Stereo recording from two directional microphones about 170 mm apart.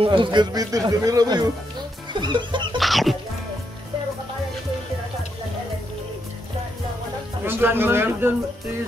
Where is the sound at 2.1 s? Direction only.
25° right (ahead or behind).